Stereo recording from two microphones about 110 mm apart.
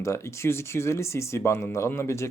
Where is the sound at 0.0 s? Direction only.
25° left (ahead or behind).